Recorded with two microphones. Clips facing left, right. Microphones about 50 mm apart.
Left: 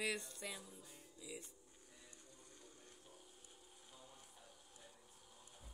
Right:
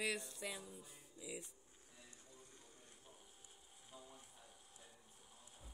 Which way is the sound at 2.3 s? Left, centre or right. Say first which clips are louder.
Even; right.